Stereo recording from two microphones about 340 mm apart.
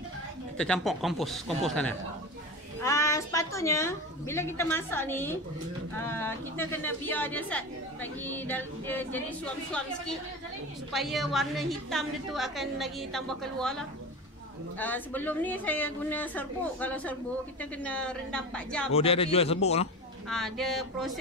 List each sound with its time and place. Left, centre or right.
0.6 s a woman's voice: centre
18.9 s a woman's voice: centre
20.2 s speech: centre